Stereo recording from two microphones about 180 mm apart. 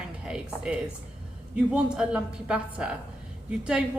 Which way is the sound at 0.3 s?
5° right (ahead or behind).